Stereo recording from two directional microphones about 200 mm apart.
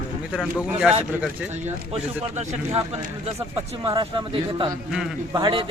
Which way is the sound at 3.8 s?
20° right (ahead or behind).